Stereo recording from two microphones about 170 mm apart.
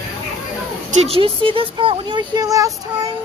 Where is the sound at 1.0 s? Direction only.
35° right (ahead or behind).